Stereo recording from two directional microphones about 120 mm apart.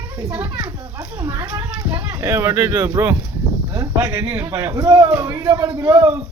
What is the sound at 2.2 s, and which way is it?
Speech, 20° right (ahead or behind).